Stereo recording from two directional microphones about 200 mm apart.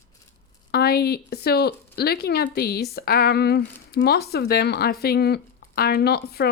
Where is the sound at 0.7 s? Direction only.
50° left (ahead or behind).